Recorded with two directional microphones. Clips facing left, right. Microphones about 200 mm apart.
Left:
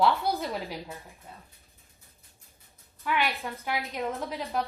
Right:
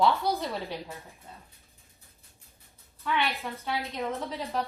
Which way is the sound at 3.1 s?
15° left (ahead or behind).